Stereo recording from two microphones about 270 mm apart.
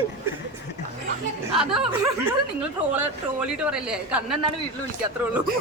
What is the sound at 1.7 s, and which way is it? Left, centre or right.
Speech, centre.